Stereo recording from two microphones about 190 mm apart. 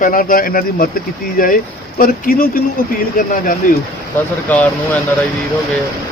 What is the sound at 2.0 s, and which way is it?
Speech, 45° left (ahead or behind).